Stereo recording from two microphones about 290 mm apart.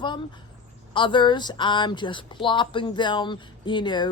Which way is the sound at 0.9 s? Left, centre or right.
Centre.